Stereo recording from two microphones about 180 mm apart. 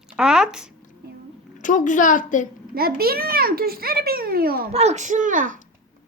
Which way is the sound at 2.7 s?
55° right (ahead or behind).